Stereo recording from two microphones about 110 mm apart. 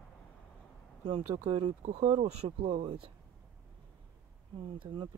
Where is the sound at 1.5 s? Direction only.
85° right; by 3.1 s 60° right (ahead or behind).